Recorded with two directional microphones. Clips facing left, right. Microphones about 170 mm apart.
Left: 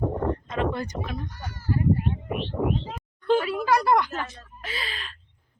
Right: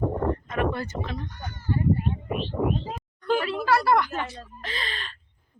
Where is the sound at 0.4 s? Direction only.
20° left (ahead or behind).